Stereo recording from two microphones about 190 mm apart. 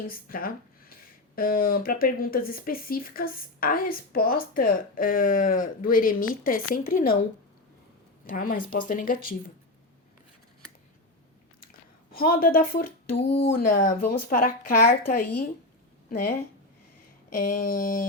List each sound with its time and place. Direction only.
0.1 s speech: 50° left (ahead or behind)
8.3 s speech: 50° left (ahead or behind)
11.6 s a sound: 50° left (ahead or behind)
13.5 s speech: 50° left (ahead or behind)
17.3 s speech: 45° left (ahead or behind)